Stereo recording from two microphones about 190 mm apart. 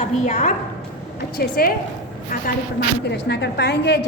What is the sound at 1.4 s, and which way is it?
Speech, 50° left (ahead or behind).